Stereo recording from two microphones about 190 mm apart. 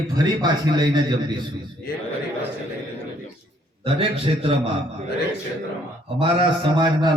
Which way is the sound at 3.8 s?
30° right (ahead or behind).